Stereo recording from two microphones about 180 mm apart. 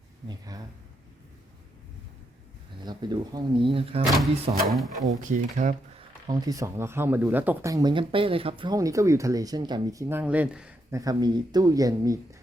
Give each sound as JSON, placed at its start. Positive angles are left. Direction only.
{"t": 0.3, "sound": "speech", "side_deg": -20}
{"t": 2.8, "sound": "speech", "side_deg": -25}
{"t": 4.0, "sound": "speech", "side_deg": 0}
{"t": 5.6, "sound": "speech", "side_deg": -45}
{"t": 6.0, "sound": "speech", "side_deg": -25}
{"t": 10.9, "sound": "speech", "side_deg": -20}